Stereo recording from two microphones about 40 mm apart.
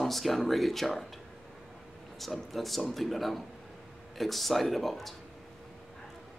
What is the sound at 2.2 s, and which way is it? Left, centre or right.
Speech, centre.